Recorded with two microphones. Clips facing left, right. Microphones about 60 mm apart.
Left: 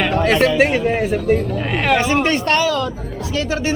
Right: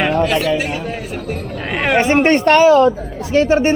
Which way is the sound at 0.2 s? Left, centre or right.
Left.